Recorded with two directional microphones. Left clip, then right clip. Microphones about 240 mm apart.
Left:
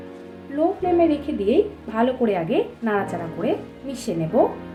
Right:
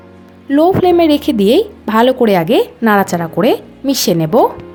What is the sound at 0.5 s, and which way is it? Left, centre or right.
A woman's voice, right.